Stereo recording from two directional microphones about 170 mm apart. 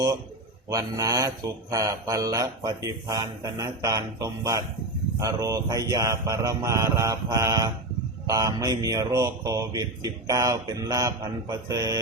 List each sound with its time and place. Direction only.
0.7 s mantra: 20° right (ahead or behind)